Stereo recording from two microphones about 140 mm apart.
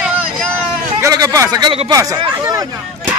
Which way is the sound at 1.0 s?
25° right (ahead or behind).